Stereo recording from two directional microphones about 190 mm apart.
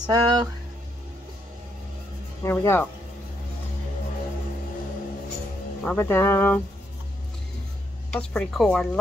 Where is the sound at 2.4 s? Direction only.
15° left (ahead or behind).